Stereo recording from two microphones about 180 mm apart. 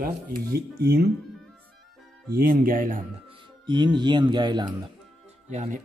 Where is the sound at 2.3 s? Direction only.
55° right (ahead or behind).